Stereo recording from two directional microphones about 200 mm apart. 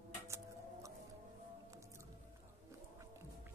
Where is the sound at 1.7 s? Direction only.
15° right (ahead or behind).